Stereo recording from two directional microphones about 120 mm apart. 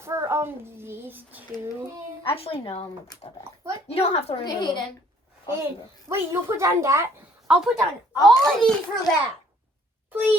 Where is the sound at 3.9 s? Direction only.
60° left (ahead or behind).